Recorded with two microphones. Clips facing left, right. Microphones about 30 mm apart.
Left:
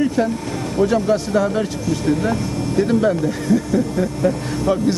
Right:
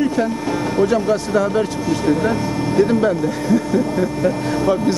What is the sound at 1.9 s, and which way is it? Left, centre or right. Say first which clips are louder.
Speech: right 1 dB; centre.